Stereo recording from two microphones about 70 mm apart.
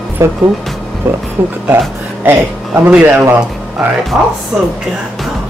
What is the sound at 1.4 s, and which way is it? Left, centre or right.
Speech, right.